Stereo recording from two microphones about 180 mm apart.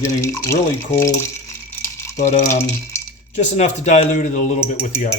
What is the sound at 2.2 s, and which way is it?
Speech, 45° left (ahead or behind).